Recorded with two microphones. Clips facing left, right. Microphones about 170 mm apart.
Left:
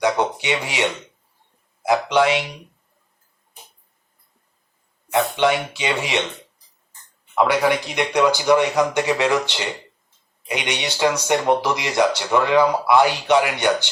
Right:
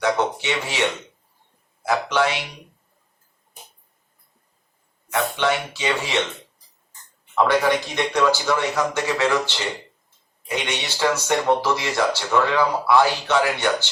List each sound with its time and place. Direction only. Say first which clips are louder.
0.0 s speech: left 1 dB; 15° left (ahead or behind)
5.1 s speech: left 3 dB; 20° left (ahead or behind)
7.3 s speech: left 1 dB; 10° left (ahead or behind)